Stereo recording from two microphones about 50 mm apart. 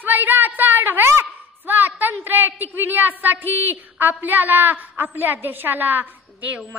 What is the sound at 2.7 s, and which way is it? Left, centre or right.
A woman's voice, right.